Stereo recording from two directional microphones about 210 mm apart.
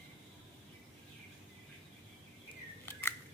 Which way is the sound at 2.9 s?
10° left (ahead or behind).